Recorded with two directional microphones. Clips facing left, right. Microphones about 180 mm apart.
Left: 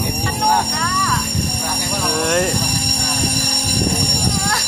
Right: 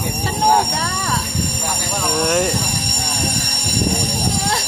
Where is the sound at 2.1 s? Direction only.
Centre (ahead or behind).